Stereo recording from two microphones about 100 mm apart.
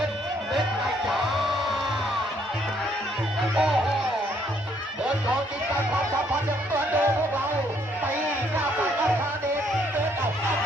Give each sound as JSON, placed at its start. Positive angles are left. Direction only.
{"t": 1.0, "sound": "music", "side_deg": 0}
{"t": 3.5, "sound": "music", "side_deg": -5}
{"t": 6.7, "sound": "music", "side_deg": -20}